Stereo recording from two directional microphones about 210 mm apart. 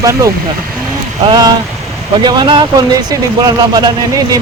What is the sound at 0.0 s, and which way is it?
Speech, 15° right (ahead or behind).